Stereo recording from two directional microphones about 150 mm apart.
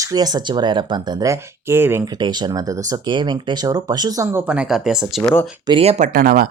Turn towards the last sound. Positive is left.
turn(degrees=-75)  # may be behind; listen again after turning